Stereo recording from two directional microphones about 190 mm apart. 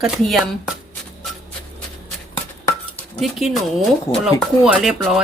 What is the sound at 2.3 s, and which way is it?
Dishes, 10° left (ahead or behind).